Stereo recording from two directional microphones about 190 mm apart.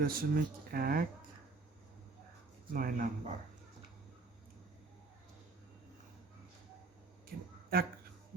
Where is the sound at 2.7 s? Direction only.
45° right (ahead or behind).